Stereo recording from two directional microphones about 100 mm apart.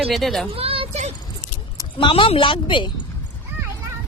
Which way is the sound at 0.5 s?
70° right (ahead or behind).